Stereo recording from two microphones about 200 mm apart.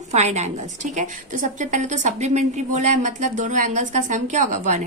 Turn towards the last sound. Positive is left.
turn(degrees=-40)  # may be behind; listen again after turning